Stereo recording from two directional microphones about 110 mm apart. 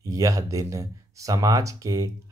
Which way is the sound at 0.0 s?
30° right (ahead or behind).